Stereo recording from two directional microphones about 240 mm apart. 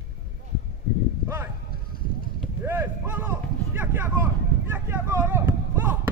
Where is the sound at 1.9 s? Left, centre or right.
Left.